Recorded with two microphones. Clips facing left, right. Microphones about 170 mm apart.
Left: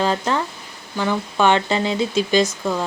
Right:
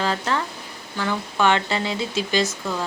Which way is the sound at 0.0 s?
15° left (ahead or behind).